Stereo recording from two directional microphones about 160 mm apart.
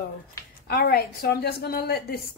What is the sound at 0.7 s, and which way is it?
A woman's voice, 80° left.